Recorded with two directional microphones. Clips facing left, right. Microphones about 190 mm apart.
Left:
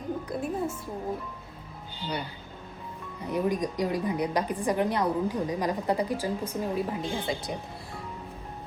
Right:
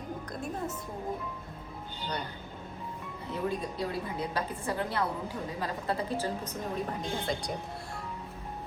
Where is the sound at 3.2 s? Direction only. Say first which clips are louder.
Left 6 dB; 15° left (ahead or behind).